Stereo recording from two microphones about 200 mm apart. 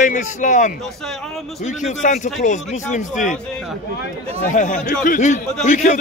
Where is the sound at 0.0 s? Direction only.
40° left (ahead or behind).